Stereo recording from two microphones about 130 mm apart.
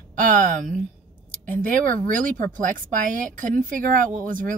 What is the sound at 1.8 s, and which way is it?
Speech, 90° right.